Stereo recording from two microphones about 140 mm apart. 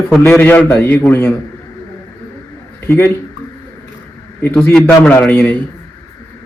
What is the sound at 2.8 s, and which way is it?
Speech, 15° left (ahead or behind).